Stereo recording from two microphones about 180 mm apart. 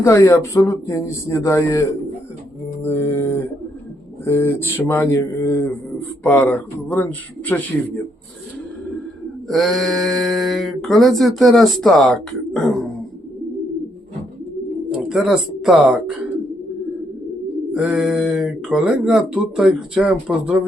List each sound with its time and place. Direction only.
0.0 s speech: 15° left (ahead or behind)
2.8 s speech: 10° left (ahead or behind)
9.5 s speech: centre (ahead or behind)
14.8 s speech: 5° right (ahead or behind)
17.7 s speech: 5° right (ahead or behind)